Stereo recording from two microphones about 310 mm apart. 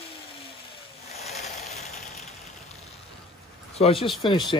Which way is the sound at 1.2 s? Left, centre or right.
Left.